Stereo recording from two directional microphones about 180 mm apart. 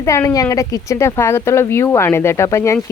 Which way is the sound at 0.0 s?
15° left (ahead or behind).